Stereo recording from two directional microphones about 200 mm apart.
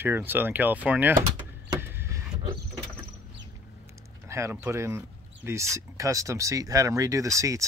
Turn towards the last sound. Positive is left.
turn(degrees=-15)  # may be behind; listen again after turning